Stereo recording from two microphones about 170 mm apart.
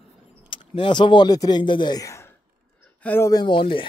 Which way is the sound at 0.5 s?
30° left (ahead or behind).